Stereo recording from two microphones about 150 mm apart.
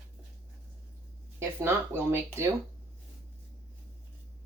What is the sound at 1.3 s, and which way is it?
Speech, 15° right (ahead or behind).